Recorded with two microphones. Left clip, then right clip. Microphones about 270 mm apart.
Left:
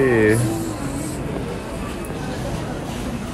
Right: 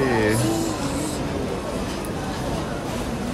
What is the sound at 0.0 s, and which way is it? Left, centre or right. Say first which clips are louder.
Music: left 5 dB; centre.